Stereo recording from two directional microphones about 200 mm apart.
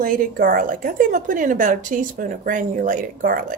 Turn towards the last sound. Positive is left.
turn(degrees=-45)  # may be behind; listen again after turning